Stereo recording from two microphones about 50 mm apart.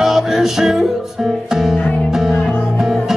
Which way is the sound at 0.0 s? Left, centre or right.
Centre.